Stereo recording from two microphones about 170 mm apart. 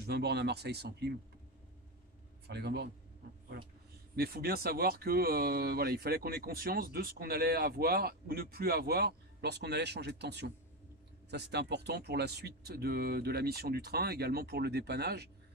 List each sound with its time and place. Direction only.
0.0 s speech: 75° right (ahead or behind)
2.4 s a man's voice: 75° right (ahead or behind)
4.1 s speech: 65° right (ahead or behind)